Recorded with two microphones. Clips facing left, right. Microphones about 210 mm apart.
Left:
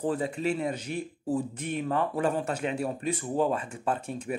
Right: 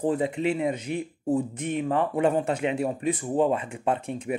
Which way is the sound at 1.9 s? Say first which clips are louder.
Right 4 dB; 20° right (ahead or behind).